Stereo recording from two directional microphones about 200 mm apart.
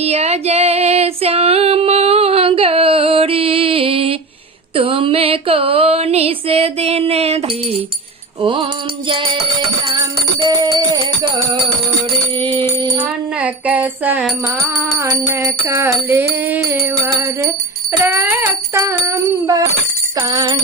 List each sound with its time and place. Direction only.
0.0 s female singing: 30° right (ahead or behind)
4.7 s a sound: 25° right (ahead or behind)
10.4 s music: 20° right (ahead or behind)
12.4 s music: 25° right (ahead or behind)
13.4 s music: 5° right (ahead or behind)
20.1 s a sound: 20° right (ahead or behind)